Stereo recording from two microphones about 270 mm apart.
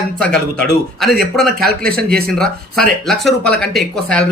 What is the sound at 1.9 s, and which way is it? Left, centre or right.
Speech, right.